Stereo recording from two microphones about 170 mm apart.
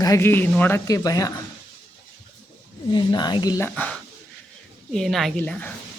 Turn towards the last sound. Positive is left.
turn(degrees=5)  # may be behind; listen again after turning